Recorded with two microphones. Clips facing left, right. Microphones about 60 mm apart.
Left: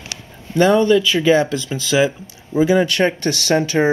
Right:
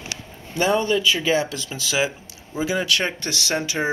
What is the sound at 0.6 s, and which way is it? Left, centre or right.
Speech, centre.